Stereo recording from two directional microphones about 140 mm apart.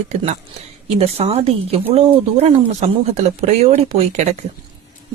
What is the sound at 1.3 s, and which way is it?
Speech, 45° right (ahead or behind).